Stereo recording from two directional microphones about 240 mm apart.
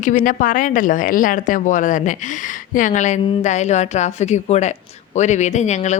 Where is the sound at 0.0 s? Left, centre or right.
Left.